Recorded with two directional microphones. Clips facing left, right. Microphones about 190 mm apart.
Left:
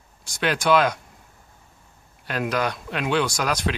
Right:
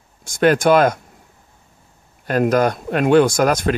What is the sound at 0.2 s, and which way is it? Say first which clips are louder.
Speech: right 10 dB; 50° right (ahead or behind).